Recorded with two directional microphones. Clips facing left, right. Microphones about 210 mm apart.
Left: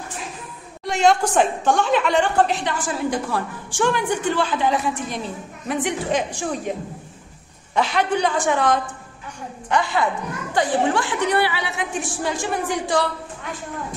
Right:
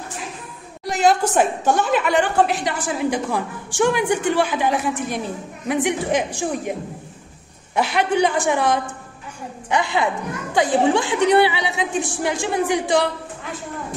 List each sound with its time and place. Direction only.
0.8 s a woman's voice: centre (ahead or behind)
7.7 s a woman's voice: 10° right (ahead or behind)